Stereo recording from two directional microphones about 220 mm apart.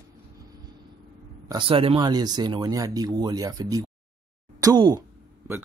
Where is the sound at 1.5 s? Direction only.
25° right (ahead or behind).